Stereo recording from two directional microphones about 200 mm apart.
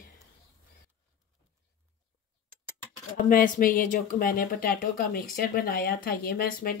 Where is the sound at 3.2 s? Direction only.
45° left (ahead or behind).